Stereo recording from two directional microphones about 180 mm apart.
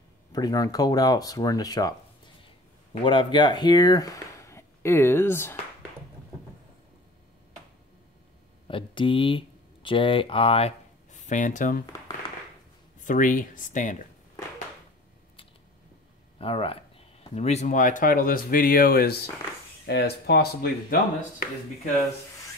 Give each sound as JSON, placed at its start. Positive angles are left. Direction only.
{"t": 0.3, "sound": "speech", "side_deg": 20}
{"t": 8.6, "sound": "speech", "side_deg": 30}
{"t": 13.0, "sound": "speech", "side_deg": 45}
{"t": 16.3, "sound": "speech", "side_deg": 30}